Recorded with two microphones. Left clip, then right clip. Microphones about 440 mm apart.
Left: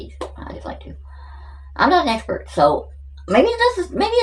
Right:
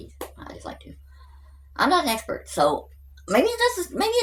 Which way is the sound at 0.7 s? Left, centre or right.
Right.